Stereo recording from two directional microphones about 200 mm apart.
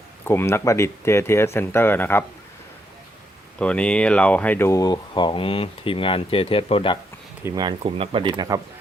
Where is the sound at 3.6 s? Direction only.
5° left (ahead or behind); by 7.0 s 25° left (ahead or behind).